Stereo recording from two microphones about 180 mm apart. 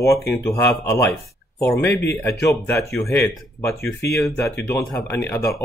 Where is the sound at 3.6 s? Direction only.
15° left (ahead or behind).